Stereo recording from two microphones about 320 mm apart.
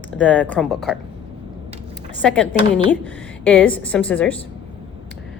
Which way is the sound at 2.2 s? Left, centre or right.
Centre.